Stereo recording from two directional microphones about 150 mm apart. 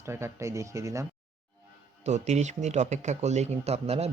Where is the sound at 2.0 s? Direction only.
50° right (ahead or behind).